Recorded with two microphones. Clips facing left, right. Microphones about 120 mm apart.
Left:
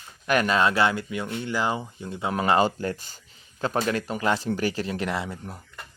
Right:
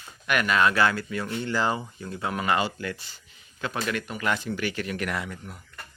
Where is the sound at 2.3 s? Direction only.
30° left (ahead or behind).